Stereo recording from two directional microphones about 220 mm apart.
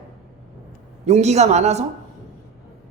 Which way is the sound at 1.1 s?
30° right (ahead or behind).